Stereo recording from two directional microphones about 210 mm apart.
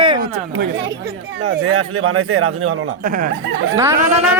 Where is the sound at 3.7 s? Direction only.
15° right (ahead or behind).